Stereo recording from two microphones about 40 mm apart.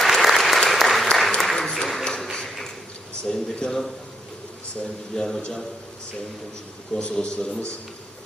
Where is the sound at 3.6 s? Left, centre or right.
Left.